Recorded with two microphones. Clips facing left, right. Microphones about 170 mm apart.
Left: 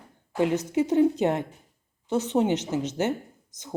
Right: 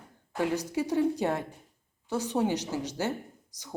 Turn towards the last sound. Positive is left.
turn(degrees=20)  # may be behind; listen again after turning